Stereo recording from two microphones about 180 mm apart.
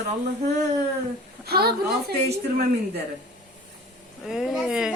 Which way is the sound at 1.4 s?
60° right (ahead or behind).